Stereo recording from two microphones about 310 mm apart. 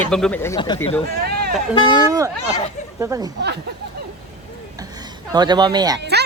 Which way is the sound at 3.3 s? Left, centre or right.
Right.